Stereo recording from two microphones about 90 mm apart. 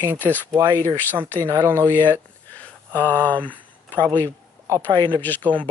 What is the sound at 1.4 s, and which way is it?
Speech, 35° right (ahead or behind).